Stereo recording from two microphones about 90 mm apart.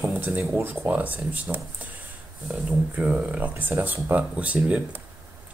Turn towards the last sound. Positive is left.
turn(degrees=-15)  # may be behind; listen again after turning